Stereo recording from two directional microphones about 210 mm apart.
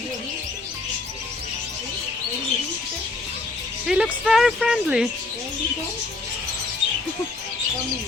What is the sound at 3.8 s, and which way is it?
Music, 5° right (ahead or behind).